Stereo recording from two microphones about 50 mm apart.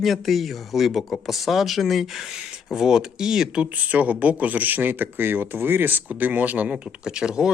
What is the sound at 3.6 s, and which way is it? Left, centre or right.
Speech, right.